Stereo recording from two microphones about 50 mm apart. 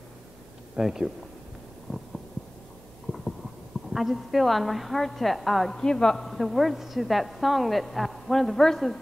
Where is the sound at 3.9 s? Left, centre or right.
Centre.